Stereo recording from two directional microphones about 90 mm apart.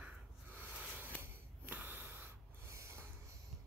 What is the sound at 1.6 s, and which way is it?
Snort, 20° right (ahead or behind).